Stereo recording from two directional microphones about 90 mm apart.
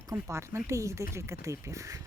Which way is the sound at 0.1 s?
30° right (ahead or behind).